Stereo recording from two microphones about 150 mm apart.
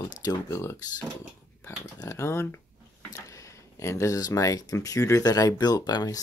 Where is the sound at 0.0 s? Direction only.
25° left (ahead or behind).